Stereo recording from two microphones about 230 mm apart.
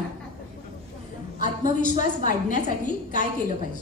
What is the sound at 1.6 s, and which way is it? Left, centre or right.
A woman's voice, left.